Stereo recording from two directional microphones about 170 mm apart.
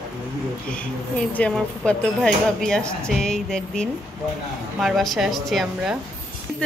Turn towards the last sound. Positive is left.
turn(degrees=-5)  # may be behind; listen again after turning